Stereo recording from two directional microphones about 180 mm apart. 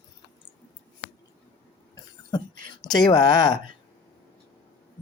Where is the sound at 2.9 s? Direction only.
20° left (ahead or behind).